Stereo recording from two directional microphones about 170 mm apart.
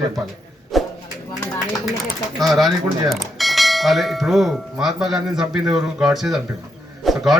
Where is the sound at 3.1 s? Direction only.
Centre (ahead or behind).